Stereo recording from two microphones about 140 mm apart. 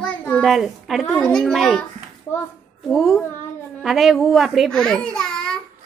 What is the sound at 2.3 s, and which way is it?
Speech, 15° left (ahead or behind).